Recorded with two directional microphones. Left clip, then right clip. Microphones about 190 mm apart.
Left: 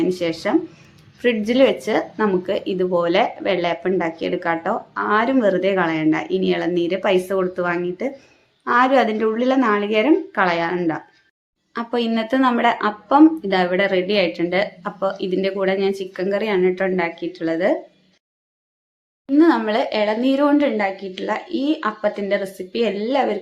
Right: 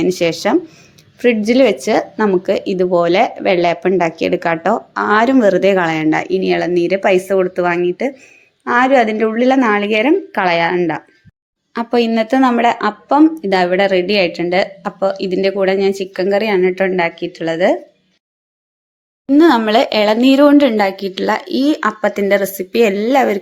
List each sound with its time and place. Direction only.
0.0 s speech: 35° right (ahead or behind)
1.2 s speech: 25° right (ahead or behind)
19.3 s speech: 40° right (ahead or behind)